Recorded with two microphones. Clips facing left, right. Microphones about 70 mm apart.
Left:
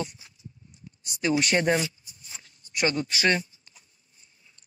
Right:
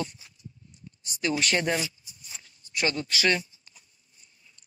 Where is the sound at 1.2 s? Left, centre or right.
Centre.